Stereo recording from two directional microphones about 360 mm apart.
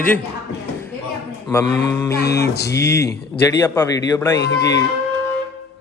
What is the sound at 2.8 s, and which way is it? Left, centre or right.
A man's voice, centre.